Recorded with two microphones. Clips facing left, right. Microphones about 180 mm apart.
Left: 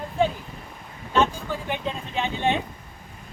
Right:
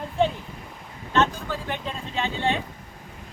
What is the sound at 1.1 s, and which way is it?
Speech, 10° left (ahead or behind).